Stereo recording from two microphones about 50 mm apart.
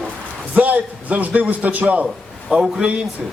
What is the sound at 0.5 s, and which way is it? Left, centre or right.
A man's voice, right.